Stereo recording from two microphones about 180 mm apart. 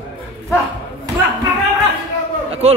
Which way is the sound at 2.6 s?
35° right (ahead or behind).